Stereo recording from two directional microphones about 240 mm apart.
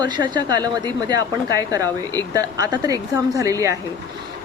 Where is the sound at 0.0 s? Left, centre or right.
Centre.